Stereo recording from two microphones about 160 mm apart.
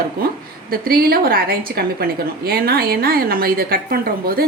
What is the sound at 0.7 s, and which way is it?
A woman's voice, 70° right (ahead or behind).